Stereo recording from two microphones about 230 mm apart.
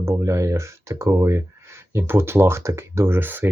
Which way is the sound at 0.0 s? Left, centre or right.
Centre.